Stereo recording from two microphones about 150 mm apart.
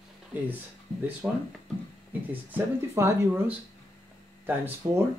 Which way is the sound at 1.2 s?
5° right (ahead or behind).